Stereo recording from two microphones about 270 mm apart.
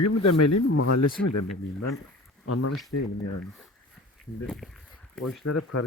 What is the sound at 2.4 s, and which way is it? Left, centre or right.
Speech, left.